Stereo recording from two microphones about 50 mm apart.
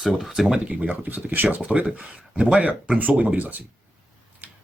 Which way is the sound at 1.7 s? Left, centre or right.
Right.